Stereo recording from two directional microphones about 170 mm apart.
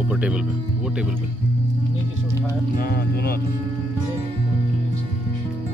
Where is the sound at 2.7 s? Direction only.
65° left (ahead or behind).